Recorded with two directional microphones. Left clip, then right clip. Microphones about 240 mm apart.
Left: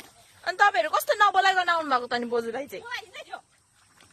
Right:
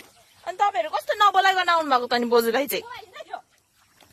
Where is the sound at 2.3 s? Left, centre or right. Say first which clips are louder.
Right 9 dB; right.